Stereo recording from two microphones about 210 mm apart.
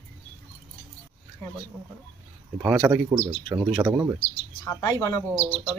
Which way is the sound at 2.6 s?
5° right (ahead or behind).